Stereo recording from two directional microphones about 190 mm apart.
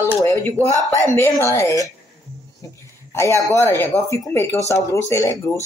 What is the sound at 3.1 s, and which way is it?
Speech, 15° left (ahead or behind).